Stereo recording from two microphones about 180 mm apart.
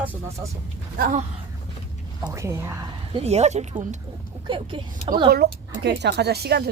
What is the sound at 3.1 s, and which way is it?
Speech, 35° right (ahead or behind).